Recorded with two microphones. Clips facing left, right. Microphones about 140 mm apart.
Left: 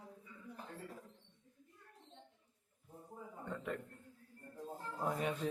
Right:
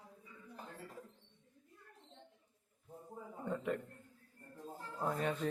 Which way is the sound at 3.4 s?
5° right (ahead or behind).